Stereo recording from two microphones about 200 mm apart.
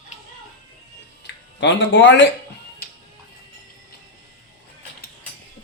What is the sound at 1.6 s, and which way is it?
Speech, 65° left (ahead or behind).